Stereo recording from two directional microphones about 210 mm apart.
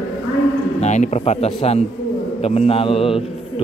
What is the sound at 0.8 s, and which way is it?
A man's voice, 35° left (ahead or behind).